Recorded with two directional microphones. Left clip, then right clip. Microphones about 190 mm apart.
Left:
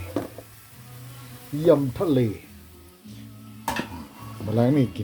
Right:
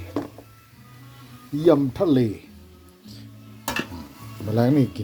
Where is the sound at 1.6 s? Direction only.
15° right (ahead or behind).